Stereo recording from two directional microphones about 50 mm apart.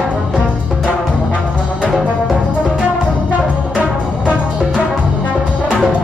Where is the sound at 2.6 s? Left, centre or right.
Centre.